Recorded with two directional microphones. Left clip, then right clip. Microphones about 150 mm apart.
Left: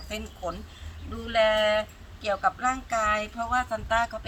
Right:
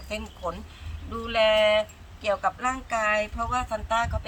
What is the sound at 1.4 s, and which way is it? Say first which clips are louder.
Speech: right 2 dB; 20° right (ahead or behind).